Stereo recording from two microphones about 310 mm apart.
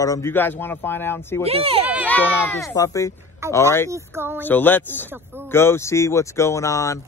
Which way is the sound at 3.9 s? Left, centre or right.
Centre.